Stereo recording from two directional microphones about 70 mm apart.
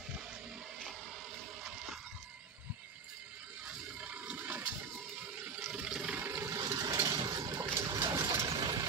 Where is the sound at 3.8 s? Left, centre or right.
Centre.